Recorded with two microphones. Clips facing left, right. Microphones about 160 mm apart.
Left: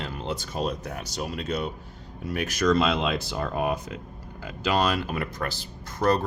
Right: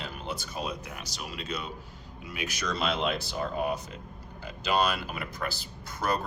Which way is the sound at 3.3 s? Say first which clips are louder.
Left 3 dB; 65° left (ahead or behind).